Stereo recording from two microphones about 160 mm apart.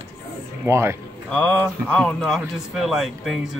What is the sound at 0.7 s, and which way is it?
Speech, 15° right (ahead or behind).